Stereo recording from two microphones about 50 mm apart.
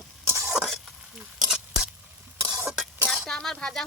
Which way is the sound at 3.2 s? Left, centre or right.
Centre.